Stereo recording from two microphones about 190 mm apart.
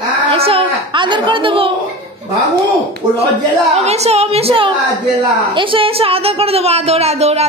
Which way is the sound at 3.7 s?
35° right (ahead or behind).